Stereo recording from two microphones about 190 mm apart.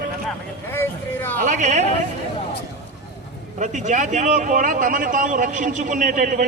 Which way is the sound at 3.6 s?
40° right (ahead or behind).